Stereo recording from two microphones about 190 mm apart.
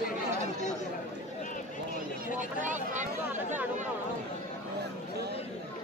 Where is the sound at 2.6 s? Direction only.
40° right (ahead or behind).